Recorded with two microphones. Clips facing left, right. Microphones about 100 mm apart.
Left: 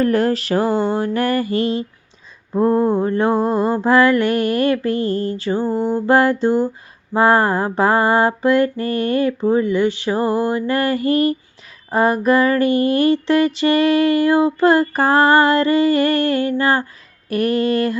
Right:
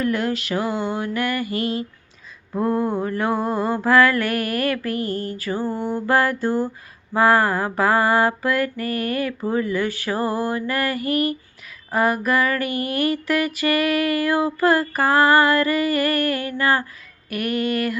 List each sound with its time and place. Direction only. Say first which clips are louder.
0.0 s mantra: left 6 dB; 40° left (ahead or behind)
2.5 s female singing: left 6 dB; 25° left (ahead or behind)
17.2 s mantra: left 6 dB; 30° left (ahead or behind)